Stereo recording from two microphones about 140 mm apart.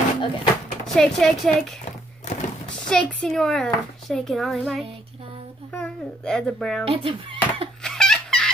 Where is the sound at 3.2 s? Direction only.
Centre (ahead or behind).